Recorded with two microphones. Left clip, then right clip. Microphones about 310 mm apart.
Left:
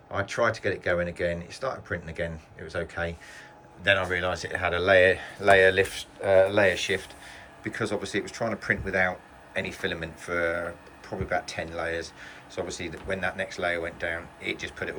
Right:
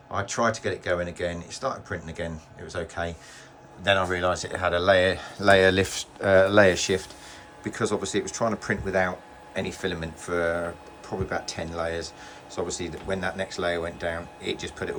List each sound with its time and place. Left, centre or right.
0.1 s speech: centre